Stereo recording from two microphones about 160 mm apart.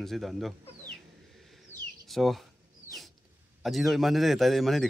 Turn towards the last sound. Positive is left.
turn(degrees=0)  # may be behind; listen again after turning